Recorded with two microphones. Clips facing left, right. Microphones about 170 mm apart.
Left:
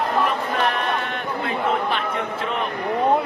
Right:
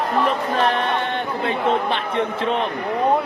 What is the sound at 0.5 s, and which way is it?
Speech, 30° right (ahead or behind).